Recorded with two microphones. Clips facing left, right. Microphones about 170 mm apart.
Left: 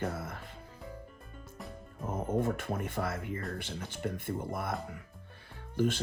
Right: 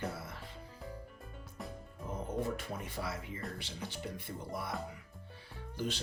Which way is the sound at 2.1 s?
50° left (ahead or behind).